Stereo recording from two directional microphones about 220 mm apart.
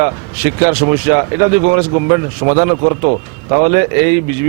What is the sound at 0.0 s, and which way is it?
Speech, 10° right (ahead or behind).